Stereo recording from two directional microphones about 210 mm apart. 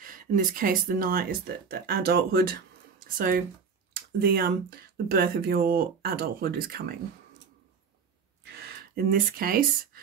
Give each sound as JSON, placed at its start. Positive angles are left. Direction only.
{"t": 0.0, "sound": "speech", "side_deg": -40}
{"t": 8.5, "sound": "speech", "side_deg": -45}